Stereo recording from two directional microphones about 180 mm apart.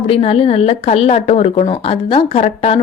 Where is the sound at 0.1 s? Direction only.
30° left (ahead or behind).